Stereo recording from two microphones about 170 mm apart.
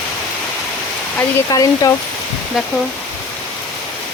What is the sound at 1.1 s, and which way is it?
Speech, 20° left (ahead or behind).